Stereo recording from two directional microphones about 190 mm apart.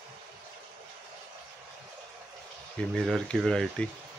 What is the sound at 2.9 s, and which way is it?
Speech, centre (ahead or behind).